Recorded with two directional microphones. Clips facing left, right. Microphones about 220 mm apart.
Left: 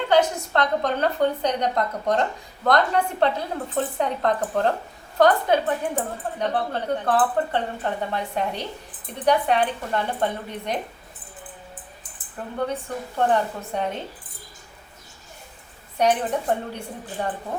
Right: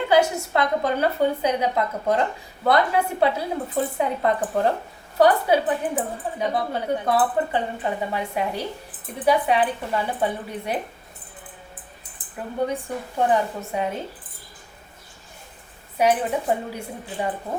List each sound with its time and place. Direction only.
0.1 s speech: 10° right (ahead or behind)
12.6 s speech: 10° right (ahead or behind)
16.0 s speech: 5° right (ahead or behind)